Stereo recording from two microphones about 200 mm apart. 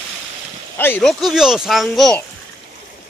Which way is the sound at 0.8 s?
5° left (ahead or behind).